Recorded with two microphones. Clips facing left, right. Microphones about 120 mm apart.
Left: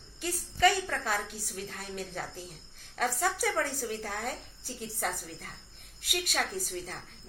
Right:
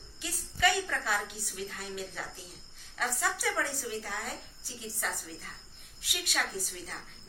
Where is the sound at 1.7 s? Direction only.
45° left (ahead or behind).